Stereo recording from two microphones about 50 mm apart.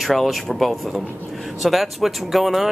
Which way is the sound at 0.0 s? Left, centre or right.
Centre.